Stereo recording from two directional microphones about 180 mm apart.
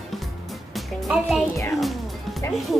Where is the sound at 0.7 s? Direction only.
Centre (ahead or behind).